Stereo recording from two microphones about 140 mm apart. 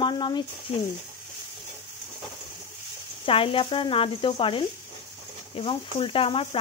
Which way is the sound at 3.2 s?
40° left (ahead or behind).